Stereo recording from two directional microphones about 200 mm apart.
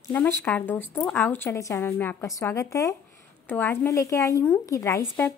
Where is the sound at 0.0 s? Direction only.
10° left (ahead or behind).